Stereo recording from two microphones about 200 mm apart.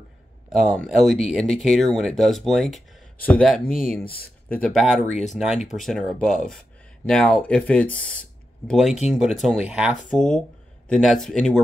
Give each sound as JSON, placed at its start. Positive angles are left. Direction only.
{"t": 0.6, "sound": "speech", "side_deg": 0}